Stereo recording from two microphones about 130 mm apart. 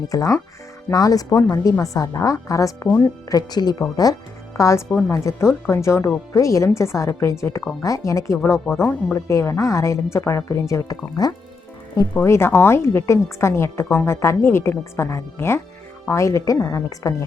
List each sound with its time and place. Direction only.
0.1 s a woman's voice: 25° left (ahead or behind)
4.9 s speech: 10° left (ahead or behind)
5.1 s a woman's voice: 25° left (ahead or behind)
8.8 s speech: 10° left (ahead or behind)
9.1 s a woman's voice: 25° left (ahead or behind)